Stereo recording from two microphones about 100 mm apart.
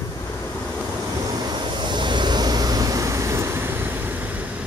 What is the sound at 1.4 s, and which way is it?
Vehicle, 50° right (ahead or behind).